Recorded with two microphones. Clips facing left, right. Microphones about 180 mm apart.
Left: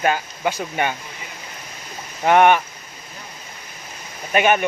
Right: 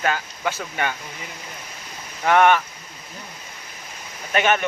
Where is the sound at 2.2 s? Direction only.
20° left (ahead or behind).